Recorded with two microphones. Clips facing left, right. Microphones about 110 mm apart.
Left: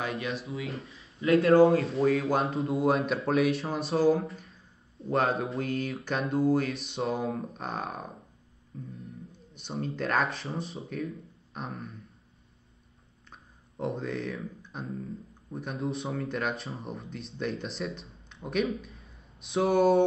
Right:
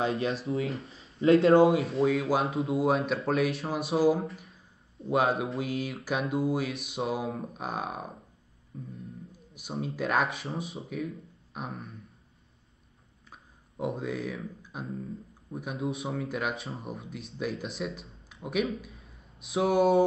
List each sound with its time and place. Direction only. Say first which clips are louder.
0.0 s speech: right 4 dB; 30° right (ahead or behind)
0.8 s a sound: right 1 dB; 30° right (ahead or behind)
1.2 s speech: right 1 dB; 30° right (ahead or behind)
1.7 s speech: left 1 dB; centre (ahead or behind)
8.7 s music: even; 5° right (ahead or behind)
9.3 s speech: even; 5° right (ahead or behind)
13.3 s speech: even; 5° right (ahead or behind)